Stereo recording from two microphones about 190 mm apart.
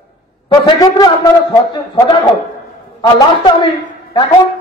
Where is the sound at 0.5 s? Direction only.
20° left (ahead or behind).